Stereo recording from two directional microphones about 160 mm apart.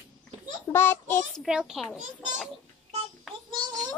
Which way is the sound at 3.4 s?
25° right (ahead or behind).